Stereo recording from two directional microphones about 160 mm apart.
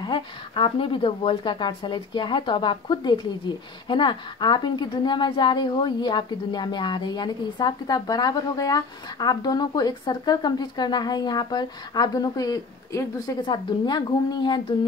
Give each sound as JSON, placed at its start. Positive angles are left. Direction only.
{"t": 0.0, "sound": "a woman's voice", "side_deg": 30}